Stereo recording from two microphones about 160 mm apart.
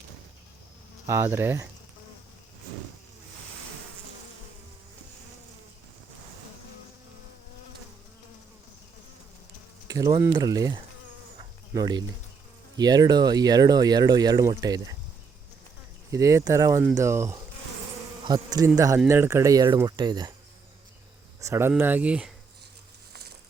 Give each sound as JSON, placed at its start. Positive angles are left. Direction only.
{"t": 1.0, "sound": "insect", "side_deg": -15}
{"t": 9.8, "sound": "speech", "side_deg": -20}
{"t": 16.1, "sound": "speech", "side_deg": -20}
{"t": 21.4, "sound": "insect", "side_deg": -15}